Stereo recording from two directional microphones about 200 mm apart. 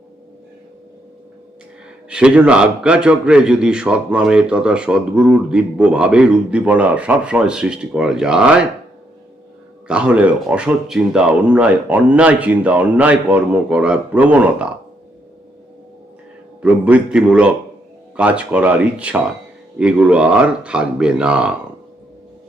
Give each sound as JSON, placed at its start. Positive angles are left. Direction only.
{"t": 2.0, "sound": "a man's voice", "side_deg": -5}
{"t": 9.8, "sound": "speech", "side_deg": -5}
{"t": 16.6, "sound": "a man's voice", "side_deg": -5}